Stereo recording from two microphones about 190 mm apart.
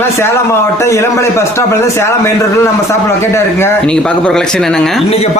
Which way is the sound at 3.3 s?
10° left (ahead or behind).